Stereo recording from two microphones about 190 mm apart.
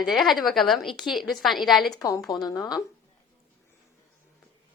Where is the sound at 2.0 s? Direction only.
20° left (ahead or behind).